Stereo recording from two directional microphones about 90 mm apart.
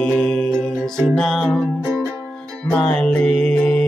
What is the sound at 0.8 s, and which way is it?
Music, 5° left (ahead or behind).